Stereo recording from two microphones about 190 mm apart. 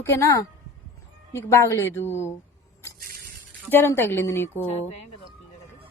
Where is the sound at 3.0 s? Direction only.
50° right (ahead or behind).